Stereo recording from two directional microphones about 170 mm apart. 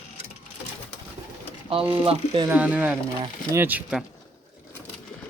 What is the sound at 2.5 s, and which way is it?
Speech, 10° right (ahead or behind).